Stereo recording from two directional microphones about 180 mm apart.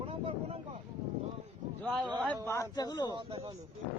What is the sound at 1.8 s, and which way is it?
Speech, 5° left (ahead or behind).